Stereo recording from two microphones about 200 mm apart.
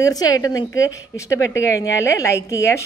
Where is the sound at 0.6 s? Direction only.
75° left (ahead or behind).